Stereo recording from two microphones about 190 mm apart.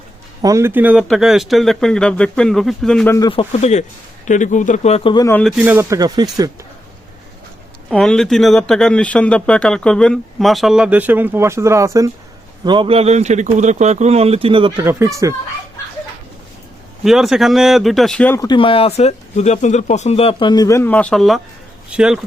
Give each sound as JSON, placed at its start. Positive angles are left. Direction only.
{"t": 0.4, "sound": "speech", "side_deg": -15}
{"t": 3.2, "sound": "speech", "side_deg": 25}
{"t": 5.4, "sound": "speech", "side_deg": 0}
{"t": 7.9, "sound": "speech", "side_deg": 5}
{"t": 14.8, "sound": "speech", "side_deg": -15}
{"t": 17.0, "sound": "speech", "side_deg": 0}
{"t": 18.3, "sound": "speech", "side_deg": 25}